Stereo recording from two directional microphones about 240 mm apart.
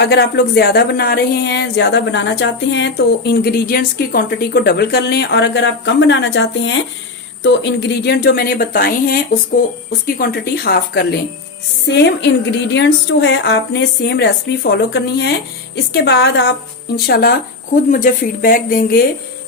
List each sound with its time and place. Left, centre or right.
0.0 s a woman's voice: left
10.2 s a woman's voice: left